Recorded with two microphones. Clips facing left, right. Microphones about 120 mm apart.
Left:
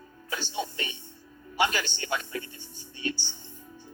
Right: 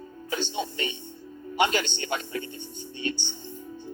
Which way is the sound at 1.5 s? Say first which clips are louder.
Right 3 dB; 20° right (ahead or behind).